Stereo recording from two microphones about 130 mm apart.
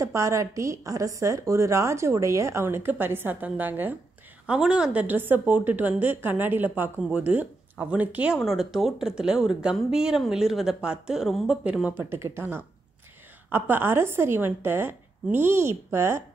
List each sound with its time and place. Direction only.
0.0 s a woman's voice: 25° right (ahead or behind)